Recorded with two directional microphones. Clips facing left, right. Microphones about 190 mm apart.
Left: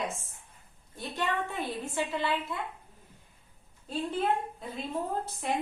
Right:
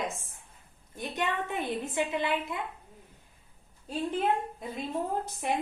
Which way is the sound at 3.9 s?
15° right (ahead or behind).